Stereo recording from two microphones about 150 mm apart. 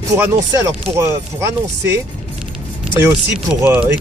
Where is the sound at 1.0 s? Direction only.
15° right (ahead or behind).